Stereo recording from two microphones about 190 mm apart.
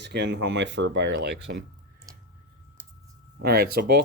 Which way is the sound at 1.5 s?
55° right (ahead or behind).